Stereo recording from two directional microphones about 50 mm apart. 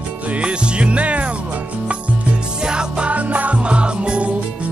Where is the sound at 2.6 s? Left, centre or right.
Centre.